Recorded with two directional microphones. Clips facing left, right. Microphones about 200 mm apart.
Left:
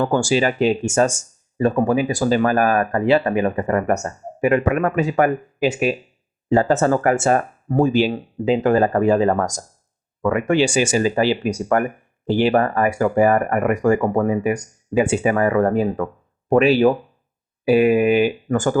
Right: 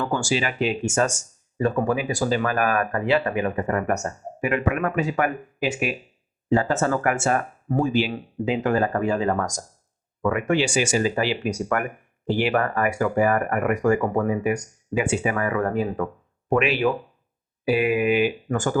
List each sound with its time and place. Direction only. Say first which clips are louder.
0.0 s speech: left 7 dB; 40° left (ahead or behind)